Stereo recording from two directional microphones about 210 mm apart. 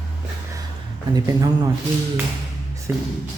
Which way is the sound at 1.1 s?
20° right (ahead or behind).